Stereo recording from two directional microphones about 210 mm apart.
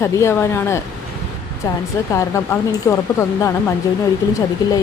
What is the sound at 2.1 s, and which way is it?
Speech, 15° left (ahead or behind).